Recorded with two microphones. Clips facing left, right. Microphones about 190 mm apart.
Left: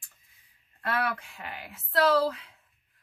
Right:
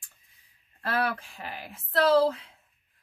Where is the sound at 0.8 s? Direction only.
30° right (ahead or behind).